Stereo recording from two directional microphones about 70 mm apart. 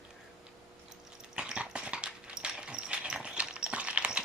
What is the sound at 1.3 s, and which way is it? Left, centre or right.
Dog, centre.